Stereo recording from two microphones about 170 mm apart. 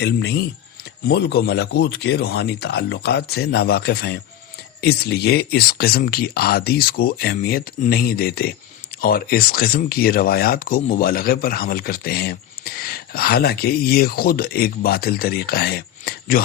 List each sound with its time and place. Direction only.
0.0 s speech: 75° left (ahead or behind)